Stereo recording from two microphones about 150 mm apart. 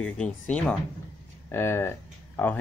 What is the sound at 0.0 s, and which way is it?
Speech, 5° left (ahead or behind).